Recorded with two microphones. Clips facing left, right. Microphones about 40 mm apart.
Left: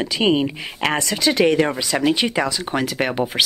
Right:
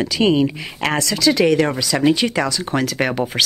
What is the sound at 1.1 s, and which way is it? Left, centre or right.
Speech, left.